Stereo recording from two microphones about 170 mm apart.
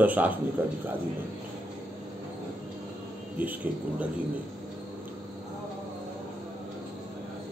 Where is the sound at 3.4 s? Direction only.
10° right (ahead or behind).